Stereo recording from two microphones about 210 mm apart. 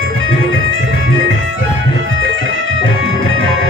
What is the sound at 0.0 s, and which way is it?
Music, 70° right (ahead or behind).